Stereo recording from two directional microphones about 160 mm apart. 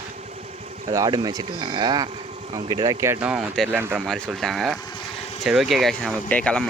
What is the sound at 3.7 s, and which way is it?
Speech, 15° right (ahead or behind).